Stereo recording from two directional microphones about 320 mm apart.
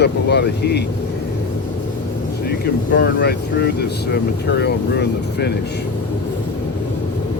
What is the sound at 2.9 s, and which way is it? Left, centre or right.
Speech, left.